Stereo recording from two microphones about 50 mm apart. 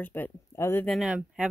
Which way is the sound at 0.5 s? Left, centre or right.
Left.